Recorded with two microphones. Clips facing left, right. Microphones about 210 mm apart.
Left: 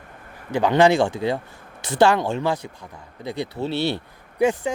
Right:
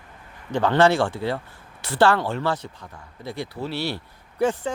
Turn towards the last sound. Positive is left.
turn(degrees=10)  # may be behind; listen again after turning